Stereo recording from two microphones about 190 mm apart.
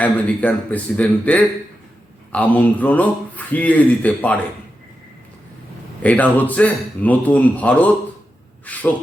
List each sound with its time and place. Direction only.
0.0 s a man's voice: 10° left (ahead or behind)
6.0 s a man's voice: 5° left (ahead or behind)
8.7 s a sound: 10° left (ahead or behind)